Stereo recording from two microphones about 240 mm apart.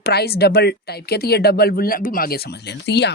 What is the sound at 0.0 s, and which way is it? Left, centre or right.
Speech, left.